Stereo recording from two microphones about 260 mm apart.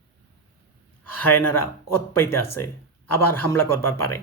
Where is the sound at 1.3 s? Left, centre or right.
Centre.